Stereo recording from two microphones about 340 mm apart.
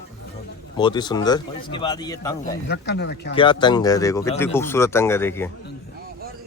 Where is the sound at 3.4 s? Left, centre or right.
Centre.